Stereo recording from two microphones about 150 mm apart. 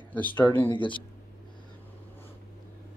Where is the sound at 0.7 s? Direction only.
30° left (ahead or behind).